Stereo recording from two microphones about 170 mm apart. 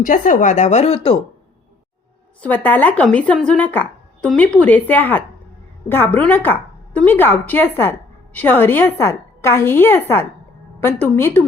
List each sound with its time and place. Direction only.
0.0 s speech: 50° left (ahead or behind); by 1.2 s 35° left (ahead or behind)
2.4 s a woman's voice: 10° left (ahead or behind)